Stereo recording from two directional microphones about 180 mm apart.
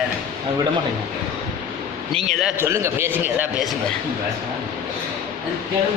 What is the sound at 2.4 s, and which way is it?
A man's voice, 15° right (ahead or behind).